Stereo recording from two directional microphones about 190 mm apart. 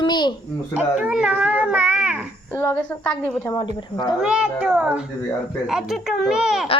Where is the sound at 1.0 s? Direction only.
5° right (ahead or behind).